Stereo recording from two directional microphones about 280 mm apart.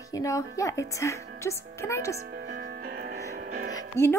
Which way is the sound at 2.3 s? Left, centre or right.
Right.